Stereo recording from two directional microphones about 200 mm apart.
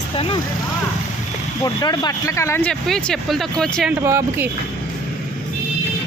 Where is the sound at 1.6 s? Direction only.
20° left (ahead or behind); by 3.9 s 5° left (ahead or behind).